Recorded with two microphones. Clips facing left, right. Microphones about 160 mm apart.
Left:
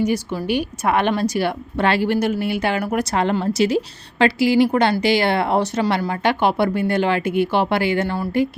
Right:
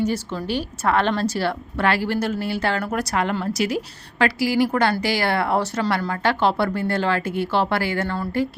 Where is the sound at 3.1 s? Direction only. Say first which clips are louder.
Left 4 dB; 25° left (ahead or behind).